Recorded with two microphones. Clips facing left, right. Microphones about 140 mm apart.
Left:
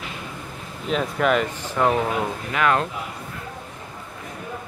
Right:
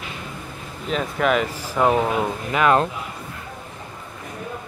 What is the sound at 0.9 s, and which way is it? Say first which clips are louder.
Speech: even; centre (ahead or behind).